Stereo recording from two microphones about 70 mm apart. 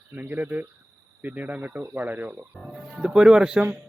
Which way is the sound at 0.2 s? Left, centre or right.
Right.